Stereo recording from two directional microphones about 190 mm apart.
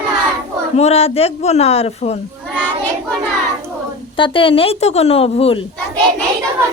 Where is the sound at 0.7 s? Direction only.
35° left (ahead or behind).